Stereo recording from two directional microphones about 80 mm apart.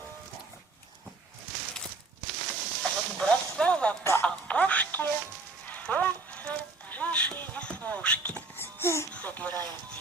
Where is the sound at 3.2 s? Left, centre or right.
Centre.